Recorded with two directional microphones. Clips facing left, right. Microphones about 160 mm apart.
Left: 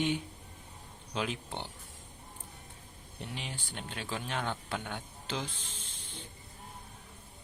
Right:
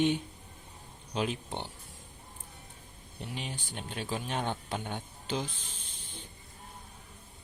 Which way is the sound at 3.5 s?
15° right (ahead or behind).